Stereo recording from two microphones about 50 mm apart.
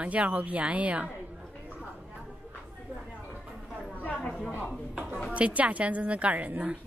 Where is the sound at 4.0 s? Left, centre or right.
Left.